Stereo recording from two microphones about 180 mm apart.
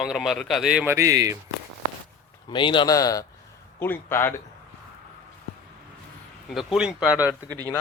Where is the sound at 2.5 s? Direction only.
25° left (ahead or behind).